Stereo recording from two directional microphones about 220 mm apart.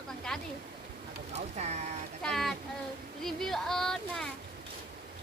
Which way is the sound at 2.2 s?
Centre (ahead or behind).